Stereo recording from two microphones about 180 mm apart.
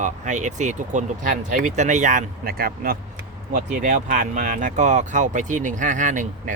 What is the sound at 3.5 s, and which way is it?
Speech, 45° right (ahead or behind).